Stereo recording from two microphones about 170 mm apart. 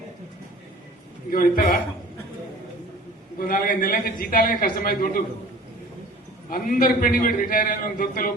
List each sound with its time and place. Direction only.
1.3 s a man's voice: 55° left (ahead or behind)
3.3 s a man's voice: 55° left (ahead or behind)
6.5 s a man's voice: 55° left (ahead or behind)